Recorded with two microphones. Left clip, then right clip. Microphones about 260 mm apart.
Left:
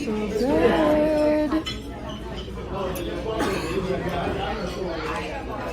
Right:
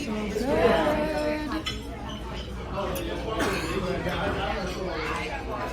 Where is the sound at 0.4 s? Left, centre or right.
Centre.